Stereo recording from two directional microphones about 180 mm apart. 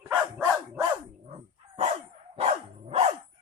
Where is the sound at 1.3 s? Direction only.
35° right (ahead or behind).